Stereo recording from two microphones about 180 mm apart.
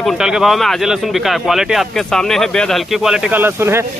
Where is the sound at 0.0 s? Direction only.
5° right (ahead or behind).